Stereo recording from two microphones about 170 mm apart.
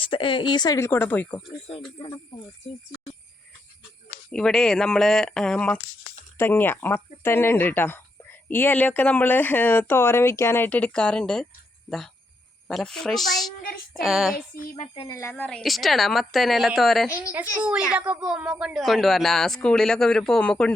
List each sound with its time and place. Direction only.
0.0 s speech: 30° left (ahead or behind); by 1.4 s 10° left (ahead or behind)
1.6 s speech: 35° left (ahead or behind)
4.3 s speech: 5° left (ahead or behind)
12.6 s speech: 5° left (ahead or behind)
15.0 s a woman's voice: 15° left (ahead or behind)